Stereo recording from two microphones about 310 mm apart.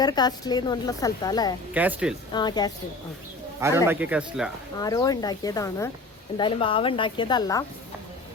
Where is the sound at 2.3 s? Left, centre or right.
Centre.